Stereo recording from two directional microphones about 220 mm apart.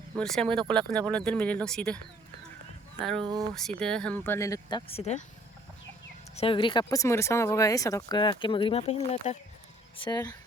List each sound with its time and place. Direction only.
0.2 s speech: 5° left (ahead or behind)
3.0 s speech: 5° left (ahead or behind)
4.9 s speech: 30° left (ahead or behind)
6.3 s speech: 25° left (ahead or behind)
10.0 s speech: 20° left (ahead or behind)